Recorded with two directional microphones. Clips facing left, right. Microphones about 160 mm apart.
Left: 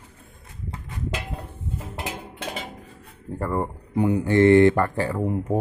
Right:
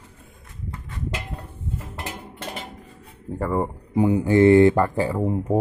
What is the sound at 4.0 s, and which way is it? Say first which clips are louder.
Speech: right 2 dB; 25° right (ahead or behind).